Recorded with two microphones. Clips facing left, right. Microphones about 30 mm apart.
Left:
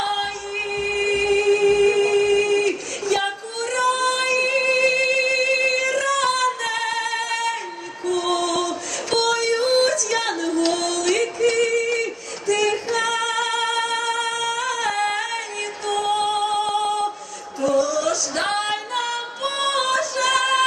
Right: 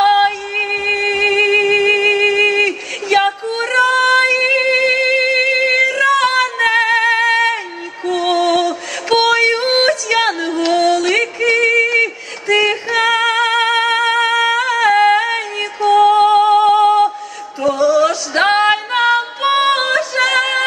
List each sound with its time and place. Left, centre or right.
0.0 s music: right
17.6 s female singing: right